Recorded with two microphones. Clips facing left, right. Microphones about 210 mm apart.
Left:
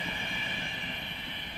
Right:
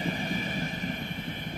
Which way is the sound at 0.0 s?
40° right (ahead or behind).